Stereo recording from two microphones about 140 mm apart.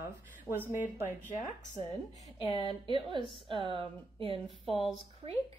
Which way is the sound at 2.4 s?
40° left (ahead or behind).